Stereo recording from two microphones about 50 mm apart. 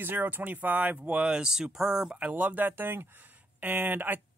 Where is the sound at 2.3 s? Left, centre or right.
Right.